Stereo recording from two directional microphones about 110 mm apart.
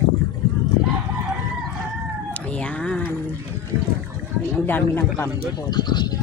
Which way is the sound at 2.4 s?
10° left (ahead or behind).